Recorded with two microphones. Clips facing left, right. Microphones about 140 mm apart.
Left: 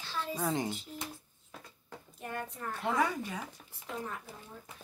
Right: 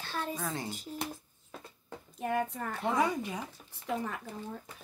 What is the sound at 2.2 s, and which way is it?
Speech, 90° right.